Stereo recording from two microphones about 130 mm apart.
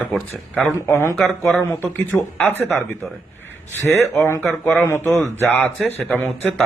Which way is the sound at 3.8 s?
20° right (ahead or behind).